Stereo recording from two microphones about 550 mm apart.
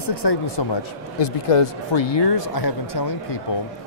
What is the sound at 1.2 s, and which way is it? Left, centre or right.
Speech, left.